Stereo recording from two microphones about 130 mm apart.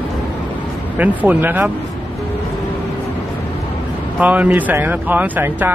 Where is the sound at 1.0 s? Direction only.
10° right (ahead or behind).